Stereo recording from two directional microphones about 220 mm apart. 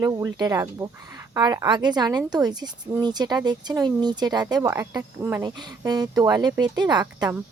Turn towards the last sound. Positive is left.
turn(degrees=-15)  # may be behind; listen again after turning